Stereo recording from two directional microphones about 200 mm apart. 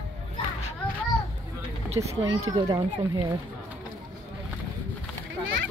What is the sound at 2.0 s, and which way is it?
Speech, 20° right (ahead or behind).